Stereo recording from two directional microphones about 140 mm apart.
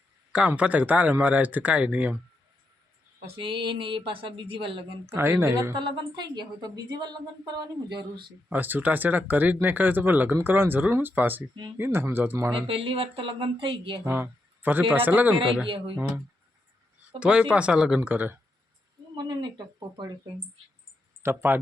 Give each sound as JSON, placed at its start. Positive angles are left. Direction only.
{"t": 0.3, "sound": "speech", "side_deg": -10}
{"t": 3.3, "sound": "speech", "side_deg": -35}
{"t": 5.0, "sound": "speech", "side_deg": -15}
{"t": 5.7, "sound": "a woman's voice", "side_deg": -30}
{"t": 8.4, "sound": "speech", "side_deg": -15}
{"t": 12.5, "sound": "speech", "side_deg": -40}
{"t": 14.0, "sound": "speech", "side_deg": -15}
{"t": 15.6, "sound": "speech", "side_deg": -40}
{"t": 16.0, "sound": "speech", "side_deg": -15}
{"t": 19.1, "sound": "speech", "side_deg": -30}
{"t": 21.2, "sound": "speech", "side_deg": -15}